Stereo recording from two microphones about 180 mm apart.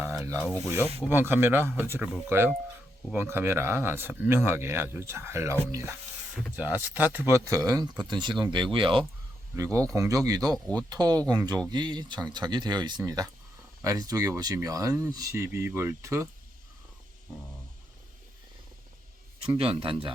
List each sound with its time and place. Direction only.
0.0 s a sound: 5° right (ahead or behind)
1.0 s speech: 10° right (ahead or behind); by 9.0 s 30° right (ahead or behind)
9.7 s speech: 20° right (ahead or behind)
10.5 s speech: 5° left (ahead or behind)
10.8 s speech: 20° right (ahead or behind)
19.5 s speech: 30° right (ahead or behind)